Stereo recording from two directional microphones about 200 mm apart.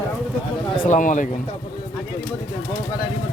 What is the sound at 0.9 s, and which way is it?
Speech, 40° left (ahead or behind).